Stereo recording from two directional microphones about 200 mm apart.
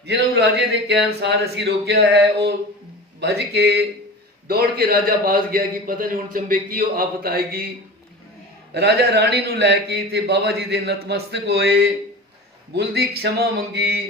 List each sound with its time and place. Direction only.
0.0 s a man's voice: 55° right (ahead or behind)
8.7 s a man's voice: 55° right (ahead or behind)